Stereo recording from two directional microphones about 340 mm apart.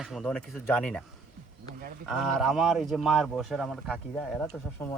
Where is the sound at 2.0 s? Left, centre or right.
Centre.